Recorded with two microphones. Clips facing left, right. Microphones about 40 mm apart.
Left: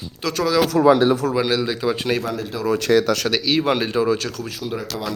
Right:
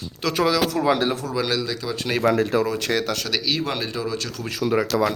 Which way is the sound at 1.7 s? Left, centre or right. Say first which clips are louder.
Left 6 dB; left.